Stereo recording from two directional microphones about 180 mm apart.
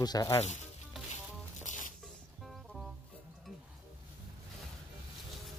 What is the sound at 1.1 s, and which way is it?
Music, 45° left (ahead or behind).